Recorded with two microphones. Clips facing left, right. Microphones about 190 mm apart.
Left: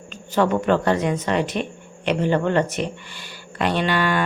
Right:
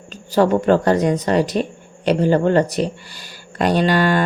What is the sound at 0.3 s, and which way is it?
Speech, 35° right (ahead or behind).